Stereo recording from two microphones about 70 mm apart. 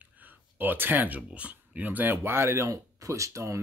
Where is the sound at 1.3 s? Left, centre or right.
Centre.